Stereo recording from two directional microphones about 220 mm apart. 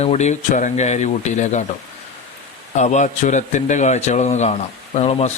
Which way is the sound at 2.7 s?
30° left (ahead or behind).